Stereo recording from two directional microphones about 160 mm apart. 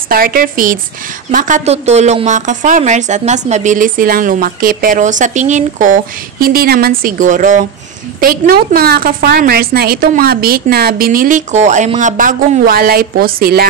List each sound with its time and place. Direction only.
0.1 s a woman's voice: 65° right (ahead or behind)
6.4 s speech: 70° right (ahead or behind); by 7.6 s 50° right (ahead or behind)
8.2 s a woman's voice: 70° right (ahead or behind)